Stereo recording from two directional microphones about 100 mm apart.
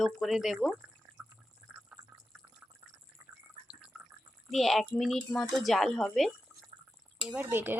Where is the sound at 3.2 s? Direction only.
35° right (ahead or behind).